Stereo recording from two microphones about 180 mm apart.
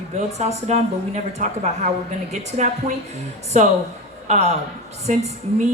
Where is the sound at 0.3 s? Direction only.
40° right (ahead or behind).